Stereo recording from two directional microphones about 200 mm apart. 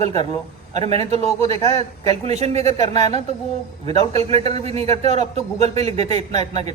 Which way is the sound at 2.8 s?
20° left (ahead or behind).